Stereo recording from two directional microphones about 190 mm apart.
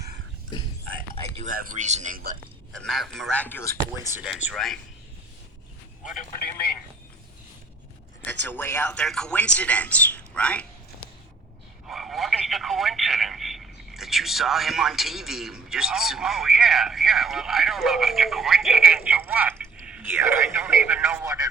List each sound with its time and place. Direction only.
1.1 s a sound: 30° right (ahead or behind)
1.5 s a man's voice: 45° right (ahead or behind)
2.7 s speech: centre (ahead or behind)
4.1 s speech: 5° right (ahead or behind)
8.2 s speech: 10° left (ahead or behind)
11.9 s speech: centre (ahead or behind); by 21.5 s 20° right (ahead or behind)